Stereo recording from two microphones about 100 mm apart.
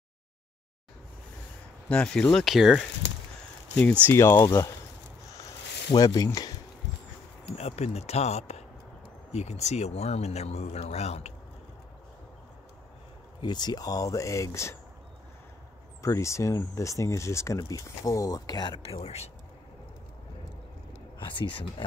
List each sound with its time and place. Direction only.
1.9 s speech: 10° left (ahead or behind)
4.1 s speech: 25° left (ahead or behind)
5.9 s speech: 40° left (ahead or behind)
7.5 s speech: 90° left
13.4 s speech: 45° left (ahead or behind); by 14.8 s 30° left (ahead or behind)
16.0 s speech: 30° left (ahead or behind)
18.7 s speech: 75° left (ahead or behind); by 19.3 s 90° left
21.4 s speech: 60° left (ahead or behind)